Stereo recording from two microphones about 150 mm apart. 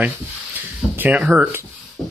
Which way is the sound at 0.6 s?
10° right (ahead or behind).